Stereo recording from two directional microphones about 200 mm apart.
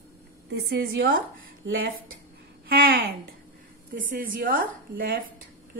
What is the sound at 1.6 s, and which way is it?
Speech, 65° right (ahead or behind).